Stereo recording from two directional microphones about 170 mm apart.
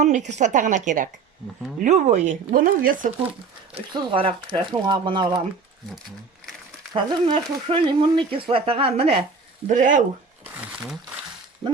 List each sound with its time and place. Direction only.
0.0 s speech: 45° right (ahead or behind)
3.8 s speech: 30° right (ahead or behind)
6.9 s speech: 30° right (ahead or behind)
9.6 s speech: 50° right (ahead or behind)